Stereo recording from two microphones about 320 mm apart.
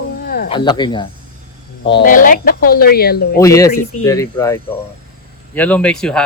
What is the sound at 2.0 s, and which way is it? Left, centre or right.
Speech, left.